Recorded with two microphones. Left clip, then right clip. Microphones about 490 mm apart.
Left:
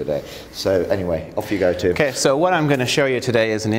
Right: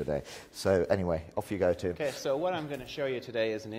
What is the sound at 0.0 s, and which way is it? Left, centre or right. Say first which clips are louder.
Speech: left 10 dB; right.